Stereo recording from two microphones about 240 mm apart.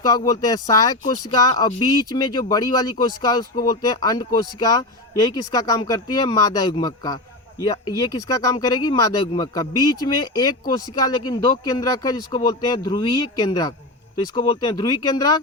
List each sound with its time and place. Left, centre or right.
0.3 s speech: centre